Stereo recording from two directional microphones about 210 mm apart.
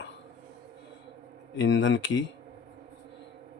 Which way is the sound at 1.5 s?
60° left (ahead or behind).